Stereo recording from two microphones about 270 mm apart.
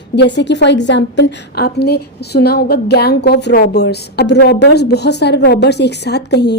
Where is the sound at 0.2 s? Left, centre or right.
Left.